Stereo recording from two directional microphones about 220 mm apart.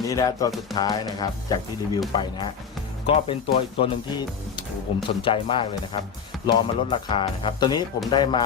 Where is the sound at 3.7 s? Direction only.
25° left (ahead or behind).